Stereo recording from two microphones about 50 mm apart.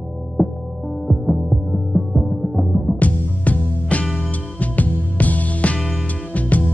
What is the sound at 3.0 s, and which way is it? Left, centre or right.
Music, left.